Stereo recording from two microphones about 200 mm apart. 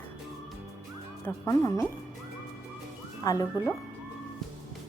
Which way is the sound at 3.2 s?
15° left (ahead or behind).